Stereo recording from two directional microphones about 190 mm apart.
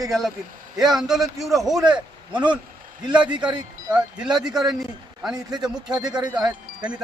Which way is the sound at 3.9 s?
5° right (ahead or behind).